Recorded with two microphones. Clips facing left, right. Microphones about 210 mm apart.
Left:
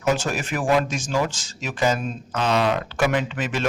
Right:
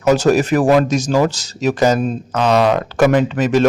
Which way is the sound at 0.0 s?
40° right (ahead or behind).